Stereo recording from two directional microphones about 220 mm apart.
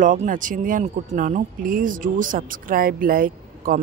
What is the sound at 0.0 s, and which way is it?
Speech, 35° right (ahead or behind).